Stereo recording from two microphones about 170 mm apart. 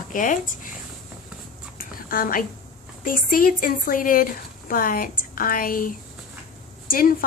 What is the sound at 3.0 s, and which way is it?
A woman's voice, 55° left (ahead or behind).